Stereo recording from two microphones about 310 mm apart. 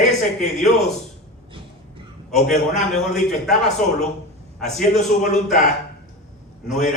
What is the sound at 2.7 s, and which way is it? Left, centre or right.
A man's voice, centre.